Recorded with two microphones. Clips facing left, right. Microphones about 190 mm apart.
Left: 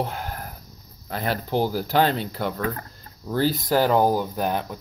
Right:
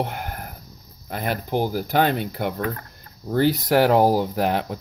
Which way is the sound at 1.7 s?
55° right (ahead or behind).